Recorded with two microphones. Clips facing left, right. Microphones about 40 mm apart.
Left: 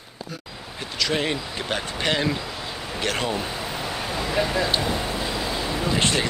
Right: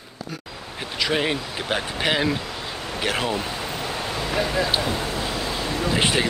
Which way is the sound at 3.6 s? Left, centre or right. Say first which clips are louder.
Right 1 dB; centre.